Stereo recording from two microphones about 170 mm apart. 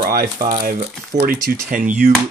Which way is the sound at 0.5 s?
50° right (ahead or behind).